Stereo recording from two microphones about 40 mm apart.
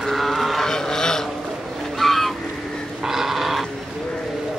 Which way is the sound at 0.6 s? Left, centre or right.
Centre.